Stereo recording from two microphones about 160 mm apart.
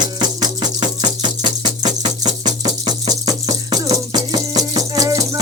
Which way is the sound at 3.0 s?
25° right (ahead or behind).